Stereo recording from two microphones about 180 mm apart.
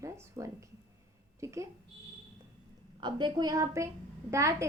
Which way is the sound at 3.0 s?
25° right (ahead or behind).